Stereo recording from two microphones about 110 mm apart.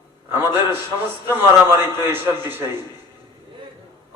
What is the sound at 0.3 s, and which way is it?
A man's voice, 20° right (ahead or behind).